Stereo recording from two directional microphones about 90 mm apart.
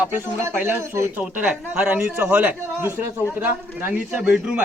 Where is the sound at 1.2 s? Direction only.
15° right (ahead or behind).